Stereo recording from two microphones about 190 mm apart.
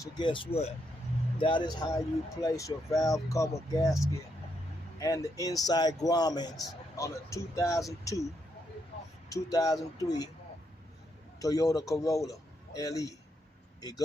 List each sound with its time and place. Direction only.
0.0 s a man's voice: 25° left (ahead or behind)
4.9 s a man's voice: 15° left (ahead or behind)
9.3 s speech: 20° left (ahead or behind)
11.3 s a man's voice: 20° left (ahead or behind)